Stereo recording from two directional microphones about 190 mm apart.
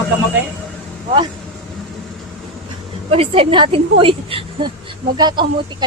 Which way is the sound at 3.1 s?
30° right (ahead or behind).